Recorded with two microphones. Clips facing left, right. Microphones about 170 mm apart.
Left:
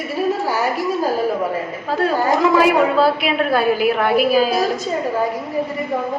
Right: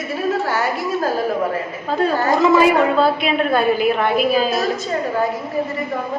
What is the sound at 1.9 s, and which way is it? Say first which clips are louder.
A woman's voice: even; 5° left (ahead or behind).